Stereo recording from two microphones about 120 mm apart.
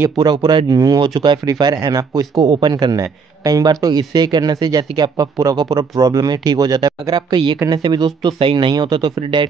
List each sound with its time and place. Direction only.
0.2 s speech: 40° right (ahead or behind)
7.5 s speech: 25° right (ahead or behind)
7.8 s speech: 40° right (ahead or behind)